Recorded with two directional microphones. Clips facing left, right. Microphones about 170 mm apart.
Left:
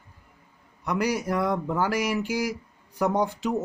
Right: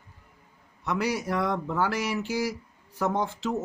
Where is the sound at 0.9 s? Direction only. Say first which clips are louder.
Left 2 dB; 10° left (ahead or behind).